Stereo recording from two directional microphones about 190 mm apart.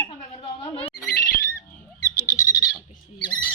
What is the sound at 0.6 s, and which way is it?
Speech, 30° left (ahead or behind).